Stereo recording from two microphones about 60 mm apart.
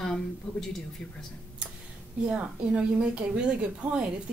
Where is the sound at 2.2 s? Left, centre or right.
Centre.